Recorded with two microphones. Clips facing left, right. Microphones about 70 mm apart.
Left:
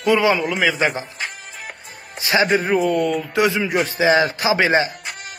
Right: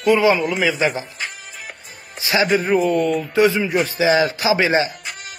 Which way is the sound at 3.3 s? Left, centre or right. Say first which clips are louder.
Right 3 dB; left.